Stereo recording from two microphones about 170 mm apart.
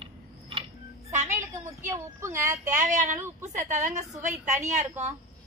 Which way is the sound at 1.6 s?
15° right (ahead or behind).